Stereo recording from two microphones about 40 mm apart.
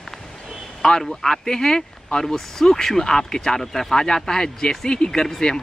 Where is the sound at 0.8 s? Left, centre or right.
Centre.